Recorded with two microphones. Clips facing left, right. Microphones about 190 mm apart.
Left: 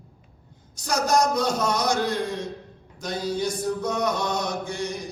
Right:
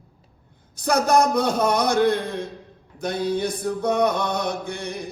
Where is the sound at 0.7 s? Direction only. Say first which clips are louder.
Right 4 dB; 55° right (ahead or behind).